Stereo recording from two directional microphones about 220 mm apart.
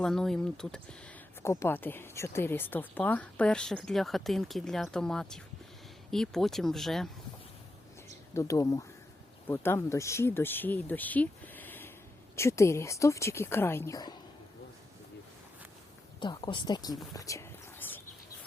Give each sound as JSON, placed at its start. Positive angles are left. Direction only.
{"t": 0.0, "sound": "speech", "side_deg": 0}
{"t": 8.3, "sound": "a woman's voice", "side_deg": 15}
{"t": 16.2, "sound": "speech", "side_deg": 20}